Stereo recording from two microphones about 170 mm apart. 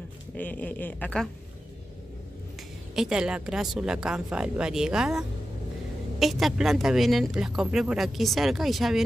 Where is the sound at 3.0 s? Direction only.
5° right (ahead or behind).